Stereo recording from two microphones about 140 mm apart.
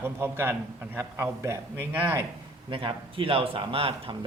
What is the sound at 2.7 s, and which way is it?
Speech, 40° right (ahead or behind).